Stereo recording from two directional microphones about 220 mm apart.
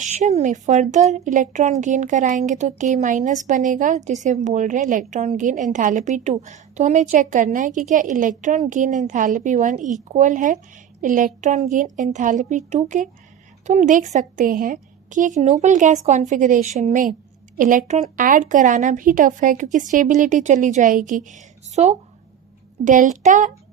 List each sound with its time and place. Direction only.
0.0 s a woman's voice: 30° right (ahead or behind)